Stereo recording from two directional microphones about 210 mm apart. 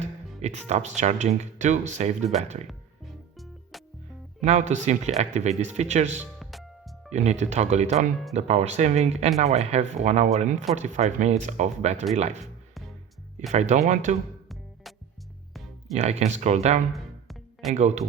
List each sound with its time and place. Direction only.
0.0 s speech: 30° right (ahead or behind)
3.3 s music: centre (ahead or behind)
4.4 s speech: 35° right (ahead or behind)
6.4 s music: centre (ahead or behind)
7.1 s speech: 35° right (ahead or behind)
13.5 s speech: 35° right (ahead or behind)
16.0 s speech: 30° right (ahead or behind)
16.9 s music: centre (ahead or behind)
17.7 s speech: 35° right (ahead or behind)